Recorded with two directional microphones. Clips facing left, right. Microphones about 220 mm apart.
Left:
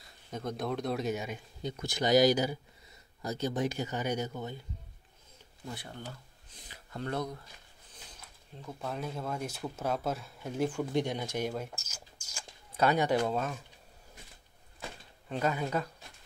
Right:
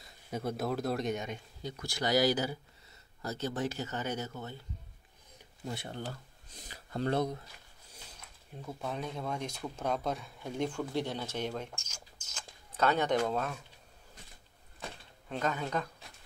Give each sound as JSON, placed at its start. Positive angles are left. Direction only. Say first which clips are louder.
{"t": 0.3, "sound": "speech", "louder": "right 1 dB", "side_deg": -10}
{"t": 1.6, "sound": "speech", "louder": "left 4 dB", "side_deg": 20}
{"t": 5.8, "sound": "speech", "louder": "right 4 dB", "side_deg": -30}
{"t": 8.6, "sound": "speech", "louder": "even", "side_deg": 0}
{"t": 10.9, "sound": "speech", "louder": "left 3 dB", "side_deg": 15}
{"t": 15.2, "sound": "speech", "louder": "left 2 dB", "side_deg": 5}